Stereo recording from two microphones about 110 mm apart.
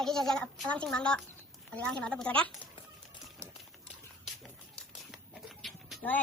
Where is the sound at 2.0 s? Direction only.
10° left (ahead or behind).